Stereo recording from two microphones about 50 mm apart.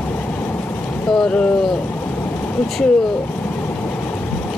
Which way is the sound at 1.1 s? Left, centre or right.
Centre.